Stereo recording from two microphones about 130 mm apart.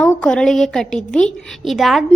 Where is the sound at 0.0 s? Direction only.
5° left (ahead or behind).